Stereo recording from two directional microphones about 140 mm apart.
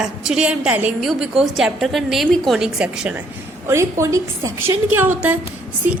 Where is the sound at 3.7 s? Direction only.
20° right (ahead or behind).